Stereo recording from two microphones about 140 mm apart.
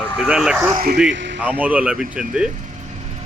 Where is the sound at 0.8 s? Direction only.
90° right.